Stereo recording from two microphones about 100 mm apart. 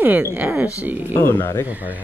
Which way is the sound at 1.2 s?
20° left (ahead or behind).